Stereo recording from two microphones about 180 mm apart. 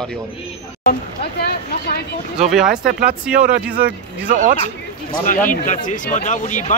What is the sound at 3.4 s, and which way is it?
Speech, 50° right (ahead or behind).